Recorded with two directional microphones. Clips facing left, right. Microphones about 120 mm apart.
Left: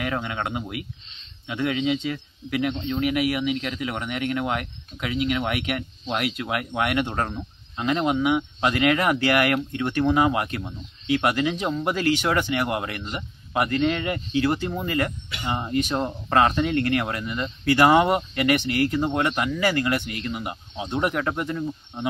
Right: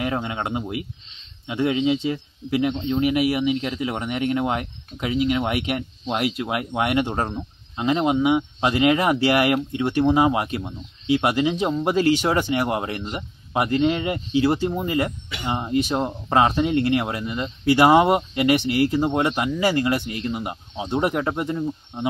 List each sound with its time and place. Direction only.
0.0 s speech: 25° right (ahead or behind)